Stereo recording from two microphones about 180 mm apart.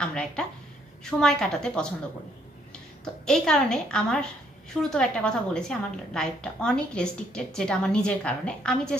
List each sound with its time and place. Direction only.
0.0 s a woman's voice: 5° left (ahead or behind)
3.3 s a woman's voice: 5° left (ahead or behind)